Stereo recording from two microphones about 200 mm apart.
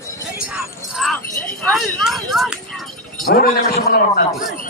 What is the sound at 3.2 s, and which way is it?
A man's voice, 50° left (ahead or behind).